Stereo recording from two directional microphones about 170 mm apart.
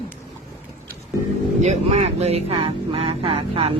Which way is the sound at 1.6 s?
40° right (ahead or behind).